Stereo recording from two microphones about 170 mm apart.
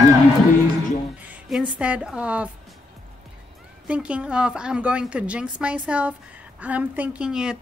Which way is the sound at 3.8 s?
5° right (ahead or behind).